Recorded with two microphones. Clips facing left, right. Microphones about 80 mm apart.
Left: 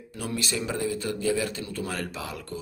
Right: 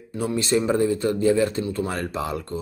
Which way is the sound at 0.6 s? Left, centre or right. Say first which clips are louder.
Right 10 dB; right.